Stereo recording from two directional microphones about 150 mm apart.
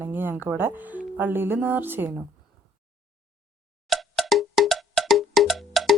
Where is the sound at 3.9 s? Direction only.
Centre (ahead or behind).